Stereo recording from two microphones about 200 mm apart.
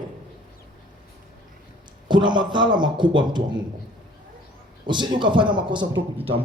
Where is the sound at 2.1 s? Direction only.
20° right (ahead or behind).